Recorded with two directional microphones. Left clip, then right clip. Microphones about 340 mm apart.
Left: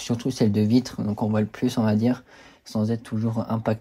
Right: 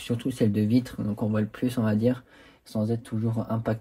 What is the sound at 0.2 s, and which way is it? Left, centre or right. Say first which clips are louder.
Speech: left 3 dB; centre.